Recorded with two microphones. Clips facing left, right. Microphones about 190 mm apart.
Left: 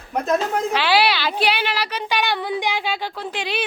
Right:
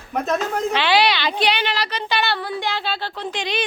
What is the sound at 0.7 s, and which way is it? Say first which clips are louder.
Speech: right 1 dB; 5° left (ahead or behind).